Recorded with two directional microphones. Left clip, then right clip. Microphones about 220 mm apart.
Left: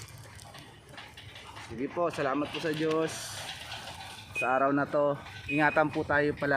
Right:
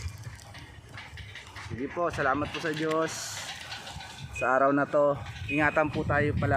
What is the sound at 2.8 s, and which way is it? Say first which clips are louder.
Speech: right 1 dB; 10° right (ahead or behind).